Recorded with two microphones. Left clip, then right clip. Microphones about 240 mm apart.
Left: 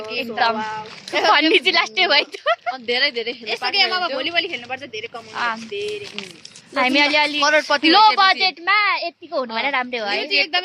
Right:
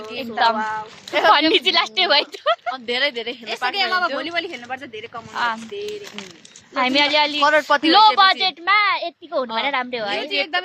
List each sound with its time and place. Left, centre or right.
0.5 s speech: centre
1.3 s speech: centre
5.3 s speech: centre
6.7 s speech: centre
7.4 s speech: centre
7.9 s speech: centre
10.2 s speech: centre